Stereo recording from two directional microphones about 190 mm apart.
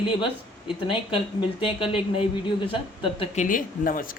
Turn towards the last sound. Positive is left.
turn(degrees=50)  # may be behind; listen again after turning